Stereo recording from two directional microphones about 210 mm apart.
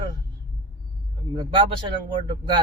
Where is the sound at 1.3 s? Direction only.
25° right (ahead or behind).